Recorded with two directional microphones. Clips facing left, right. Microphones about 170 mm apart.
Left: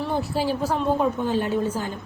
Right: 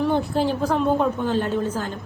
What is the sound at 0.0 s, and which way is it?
A woman's voice, 5° left (ahead or behind).